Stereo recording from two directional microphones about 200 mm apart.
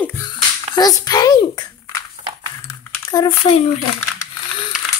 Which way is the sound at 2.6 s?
15° left (ahead or behind).